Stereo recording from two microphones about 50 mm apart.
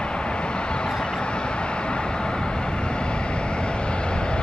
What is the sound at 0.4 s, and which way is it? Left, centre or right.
Vehicle, centre.